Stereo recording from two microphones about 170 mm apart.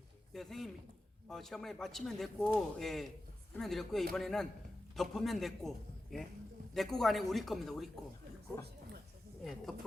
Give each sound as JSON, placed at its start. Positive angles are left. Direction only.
{"t": 0.3, "sound": "a man's voice", "side_deg": 0}
{"t": 9.4, "sound": "a man's voice", "side_deg": 0}